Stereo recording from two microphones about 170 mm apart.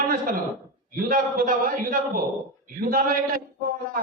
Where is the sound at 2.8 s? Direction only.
55° right (ahead or behind).